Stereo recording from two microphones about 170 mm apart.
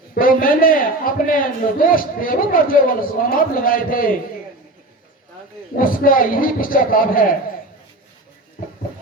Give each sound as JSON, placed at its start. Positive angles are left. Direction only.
{"t": 0.1, "sound": "a man's voice", "side_deg": 55}
{"t": 5.7, "sound": "a man's voice", "side_deg": 55}